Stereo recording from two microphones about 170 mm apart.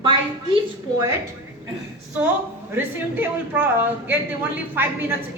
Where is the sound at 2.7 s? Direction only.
10° right (ahead or behind).